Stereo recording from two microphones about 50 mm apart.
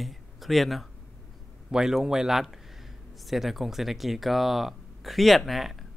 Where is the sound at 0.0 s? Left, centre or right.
Centre.